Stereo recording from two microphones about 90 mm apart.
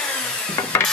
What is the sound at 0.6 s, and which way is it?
Mechanisms, 40° left (ahead or behind).